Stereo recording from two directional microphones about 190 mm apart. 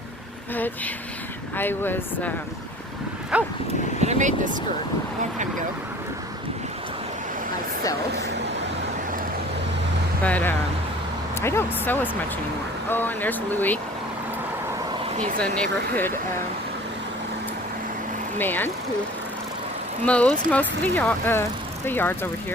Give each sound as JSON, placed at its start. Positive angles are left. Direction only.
{"t": 1.5, "sound": "speech", "side_deg": 10}
{"t": 3.3, "sound": "dog", "side_deg": -5}
{"t": 4.0, "sound": "speech", "side_deg": -40}
{"t": 10.2, "sound": "speech", "side_deg": 10}
{"t": 15.4, "sound": "speech", "side_deg": 10}
{"t": 18.3, "sound": "speech", "side_deg": 10}
{"t": 20.1, "sound": "speech", "side_deg": 5}